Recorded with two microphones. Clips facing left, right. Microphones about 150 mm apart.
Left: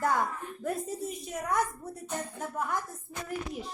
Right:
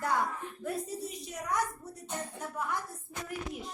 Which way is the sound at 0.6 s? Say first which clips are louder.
Left 3 dB; 45° left (ahead or behind).